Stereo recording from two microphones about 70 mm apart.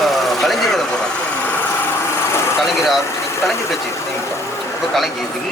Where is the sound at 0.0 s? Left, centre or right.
Centre.